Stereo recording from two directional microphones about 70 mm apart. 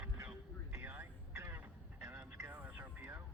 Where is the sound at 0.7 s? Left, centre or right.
Right.